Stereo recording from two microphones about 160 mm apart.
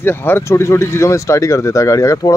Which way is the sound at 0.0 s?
15° left (ahead or behind).